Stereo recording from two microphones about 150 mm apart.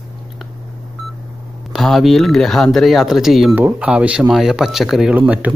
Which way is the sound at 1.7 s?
Centre (ahead or behind).